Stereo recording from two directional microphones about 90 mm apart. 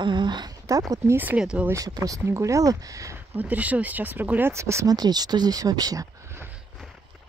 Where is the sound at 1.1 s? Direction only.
20° right (ahead or behind).